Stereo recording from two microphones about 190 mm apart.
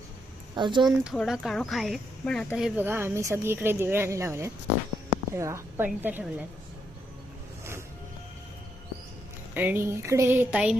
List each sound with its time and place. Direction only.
0.5 s speech: 25° right (ahead or behind)
0.9 s speech: centre (ahead or behind)
9.6 s speech: 10° right (ahead or behind)